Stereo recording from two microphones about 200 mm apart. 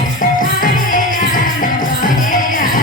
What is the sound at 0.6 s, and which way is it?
Music, 45° left (ahead or behind).